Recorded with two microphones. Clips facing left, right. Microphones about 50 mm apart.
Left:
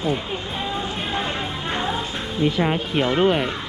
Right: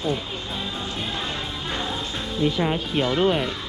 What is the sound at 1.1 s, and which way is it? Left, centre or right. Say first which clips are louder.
Music: left 4 dB; left.